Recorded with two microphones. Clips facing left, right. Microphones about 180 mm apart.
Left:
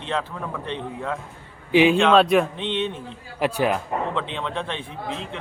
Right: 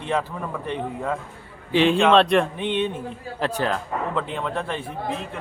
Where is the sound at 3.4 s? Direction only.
10° left (ahead or behind).